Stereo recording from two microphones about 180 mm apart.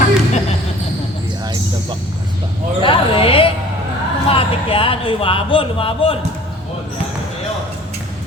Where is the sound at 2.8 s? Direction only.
30° left (ahead or behind).